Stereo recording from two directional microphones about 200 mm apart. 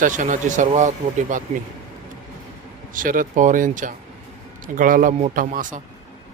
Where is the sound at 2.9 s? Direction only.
40° right (ahead or behind).